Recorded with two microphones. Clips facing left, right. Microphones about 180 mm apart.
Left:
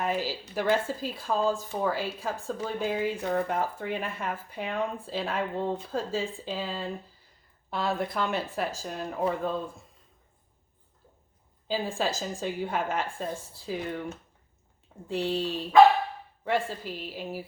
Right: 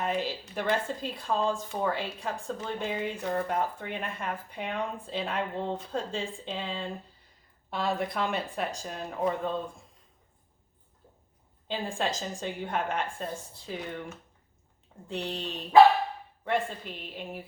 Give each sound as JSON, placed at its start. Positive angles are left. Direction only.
{"t": 0.0, "sound": "speech", "side_deg": 5}
{"t": 11.7, "sound": "speech", "side_deg": 5}
{"t": 15.0, "sound": "speech", "side_deg": 5}
{"t": 16.6, "sound": "speech", "side_deg": 5}